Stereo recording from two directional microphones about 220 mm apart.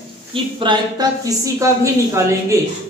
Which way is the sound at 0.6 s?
20° right (ahead or behind).